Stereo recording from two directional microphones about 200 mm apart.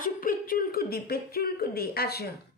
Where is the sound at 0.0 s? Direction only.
45° left (ahead or behind).